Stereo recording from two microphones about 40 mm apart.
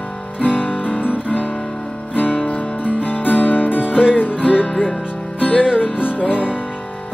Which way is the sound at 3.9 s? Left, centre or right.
Right.